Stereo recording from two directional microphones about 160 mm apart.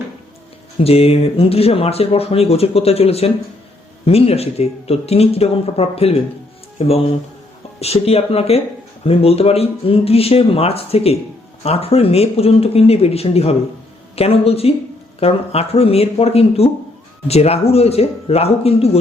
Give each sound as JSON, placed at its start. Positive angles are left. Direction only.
{"t": 0.8, "sound": "speech", "side_deg": 40}